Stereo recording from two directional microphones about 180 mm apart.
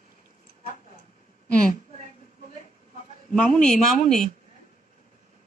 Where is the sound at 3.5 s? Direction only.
5° left (ahead or behind).